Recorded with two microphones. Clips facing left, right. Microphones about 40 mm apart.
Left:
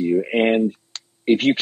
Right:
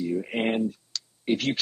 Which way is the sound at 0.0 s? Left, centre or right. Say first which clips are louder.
Left 9 dB; left.